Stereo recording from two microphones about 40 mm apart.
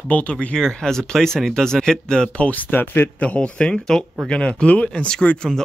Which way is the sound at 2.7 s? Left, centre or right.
Left.